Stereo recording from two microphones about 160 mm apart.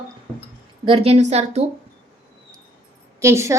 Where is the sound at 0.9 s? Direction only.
40° right (ahead or behind).